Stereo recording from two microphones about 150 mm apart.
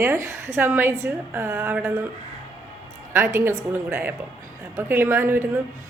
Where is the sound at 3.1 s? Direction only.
15° right (ahead or behind).